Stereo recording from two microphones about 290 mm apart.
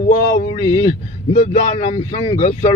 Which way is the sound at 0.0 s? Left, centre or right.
Left.